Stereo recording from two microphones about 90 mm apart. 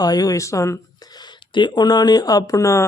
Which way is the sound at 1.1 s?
55° left (ahead or behind).